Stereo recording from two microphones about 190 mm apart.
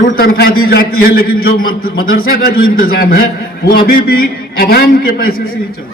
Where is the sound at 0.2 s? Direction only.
50° left (ahead or behind).